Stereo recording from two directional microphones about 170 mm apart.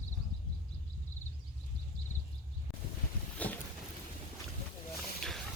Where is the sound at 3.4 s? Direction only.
10° left (ahead or behind).